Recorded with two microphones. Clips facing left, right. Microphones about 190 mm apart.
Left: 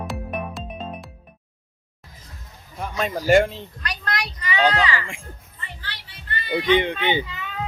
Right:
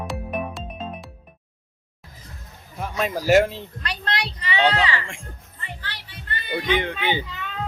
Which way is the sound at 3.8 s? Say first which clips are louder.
Right 1 dB; 30° right (ahead or behind).